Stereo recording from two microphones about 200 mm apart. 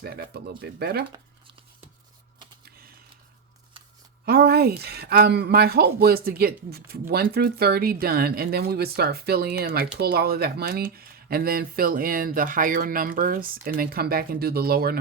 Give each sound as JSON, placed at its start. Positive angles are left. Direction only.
{"t": 0.0, "sound": "speech", "side_deg": -50}
{"t": 4.3, "sound": "speech", "side_deg": -50}